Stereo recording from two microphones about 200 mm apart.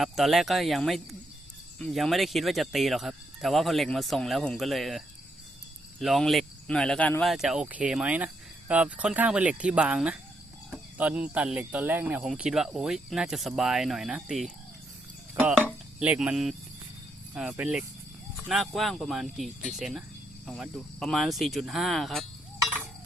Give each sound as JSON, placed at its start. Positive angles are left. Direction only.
{"t": 0.0, "sound": "speech", "side_deg": 0}
{"t": 15.6, "sound": "dishes", "side_deg": -5}
{"t": 17.3, "sound": "speech", "side_deg": -5}